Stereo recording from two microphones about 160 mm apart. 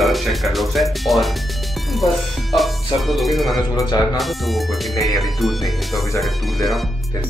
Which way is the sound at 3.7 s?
25° left (ahead or behind).